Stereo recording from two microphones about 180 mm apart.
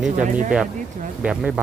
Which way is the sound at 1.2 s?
5° right (ahead or behind).